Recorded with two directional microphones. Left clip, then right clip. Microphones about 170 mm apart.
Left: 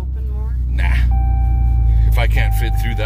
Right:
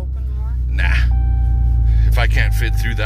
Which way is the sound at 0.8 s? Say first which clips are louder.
Right 3 dB; 15° left (ahead or behind).